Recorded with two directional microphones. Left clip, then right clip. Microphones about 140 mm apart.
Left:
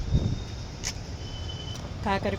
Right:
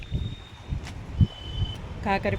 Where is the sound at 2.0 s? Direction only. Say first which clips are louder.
Right 2 dB; 15° right (ahead or behind).